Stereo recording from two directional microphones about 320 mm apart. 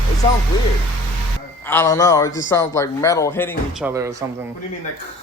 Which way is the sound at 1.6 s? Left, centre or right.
Centre.